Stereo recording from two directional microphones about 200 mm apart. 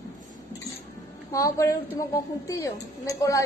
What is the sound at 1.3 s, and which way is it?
A woman's voice, 15° left (ahead or behind).